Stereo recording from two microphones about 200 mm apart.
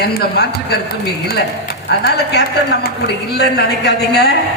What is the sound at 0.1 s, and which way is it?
Speech, 55° left (ahead or behind).